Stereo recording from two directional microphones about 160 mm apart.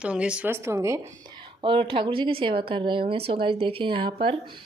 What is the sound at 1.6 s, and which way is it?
A woman's voice, 35° right (ahead or behind).